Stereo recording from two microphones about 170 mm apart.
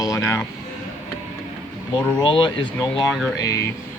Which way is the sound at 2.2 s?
30° left (ahead or behind).